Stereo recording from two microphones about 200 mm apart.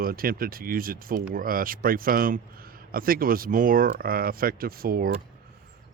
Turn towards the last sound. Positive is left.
turn(degrees=-50)  # may be behind; listen again after turning